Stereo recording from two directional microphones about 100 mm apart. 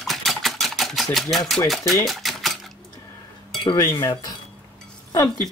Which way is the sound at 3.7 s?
30° left (ahead or behind).